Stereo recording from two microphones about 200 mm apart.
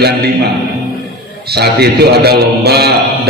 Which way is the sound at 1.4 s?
55° right (ahead or behind).